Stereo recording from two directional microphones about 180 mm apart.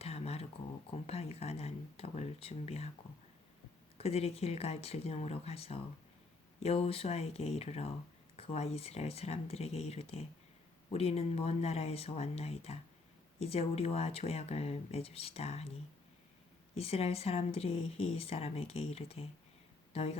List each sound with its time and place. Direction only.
0.0 s a sound: 35° left (ahead or behind)
1.0 s speech: 35° left (ahead or behind)
3.9 s speech: 35° left (ahead or behind)
16.7 s a woman's voice: 35° left (ahead or behind)